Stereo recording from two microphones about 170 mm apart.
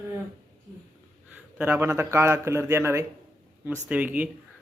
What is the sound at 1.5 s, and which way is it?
Speech, 10° right (ahead or behind).